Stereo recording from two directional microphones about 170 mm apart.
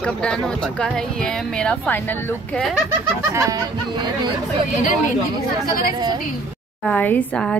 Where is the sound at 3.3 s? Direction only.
15° right (ahead or behind).